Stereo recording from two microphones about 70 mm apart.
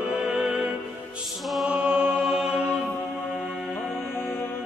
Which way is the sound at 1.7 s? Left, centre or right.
Centre.